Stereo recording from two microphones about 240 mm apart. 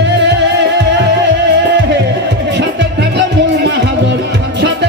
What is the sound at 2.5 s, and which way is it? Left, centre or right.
Music, right.